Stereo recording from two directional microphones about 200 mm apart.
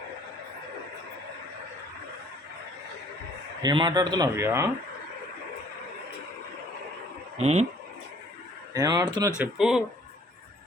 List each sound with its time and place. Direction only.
3.6 s speech: 20° right (ahead or behind)
7.3 s speech: 35° right (ahead or behind)
8.7 s speech: 20° right (ahead or behind)
9.4 s speech: centre (ahead or behind)